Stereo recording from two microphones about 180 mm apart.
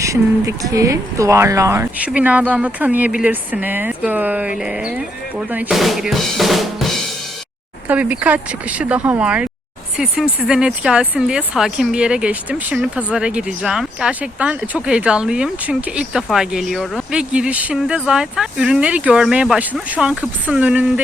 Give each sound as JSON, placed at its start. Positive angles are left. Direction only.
{"t": 0.0, "sound": "speech", "side_deg": -15}